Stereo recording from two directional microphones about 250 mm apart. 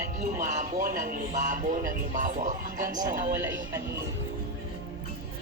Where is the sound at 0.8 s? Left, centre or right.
Right.